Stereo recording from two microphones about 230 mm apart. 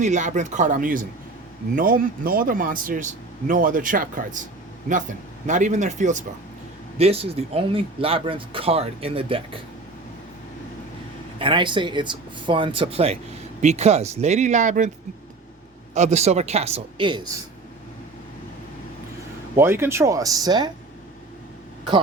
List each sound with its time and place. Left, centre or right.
0.0 s a man's voice: right
5.5 s a man's voice: right
11.3 s speech: right
16.0 s speech: right
19.5 s speech: centre